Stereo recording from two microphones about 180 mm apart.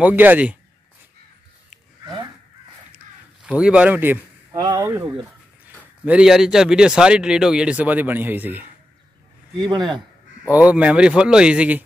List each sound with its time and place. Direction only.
0.0 s speech: 10° right (ahead or behind)
3.4 s speech: 5° right (ahead or behind)
4.5 s speech: 20° right (ahead or behind)
6.0 s speech: 5° right (ahead or behind)
9.6 s speech: 25° right (ahead or behind)
10.5 s speech: 5° right (ahead or behind)